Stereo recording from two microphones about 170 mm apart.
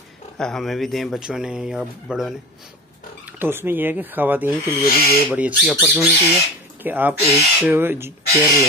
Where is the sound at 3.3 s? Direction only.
15° right (ahead or behind).